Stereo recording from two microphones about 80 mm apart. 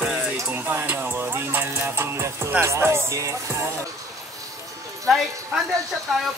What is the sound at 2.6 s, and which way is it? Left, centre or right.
Speech, right.